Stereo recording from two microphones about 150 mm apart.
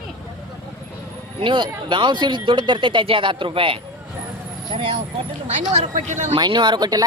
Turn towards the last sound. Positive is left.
turn(degrees=-25)  # may be behind; listen again after turning